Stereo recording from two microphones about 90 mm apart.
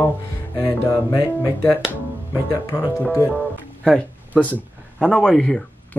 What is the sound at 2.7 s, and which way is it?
Speech, 30° left (ahead or behind).